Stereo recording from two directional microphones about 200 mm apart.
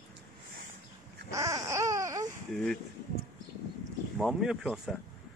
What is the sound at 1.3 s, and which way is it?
Baby cry, 15° right (ahead or behind).